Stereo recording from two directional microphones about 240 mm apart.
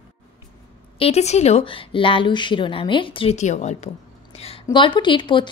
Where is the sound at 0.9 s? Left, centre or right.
Left.